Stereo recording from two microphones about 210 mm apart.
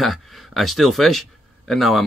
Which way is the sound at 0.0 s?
Centre (ahead or behind).